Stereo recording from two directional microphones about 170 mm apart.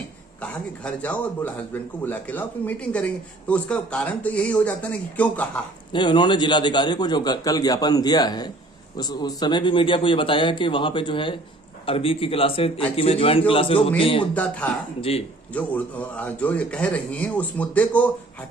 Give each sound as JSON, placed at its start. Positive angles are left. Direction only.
{"t": 0.4, "sound": "speech", "side_deg": 5}
{"t": 5.9, "sound": "a man's voice", "side_deg": 25}
{"t": 14.3, "sound": "speech", "side_deg": 10}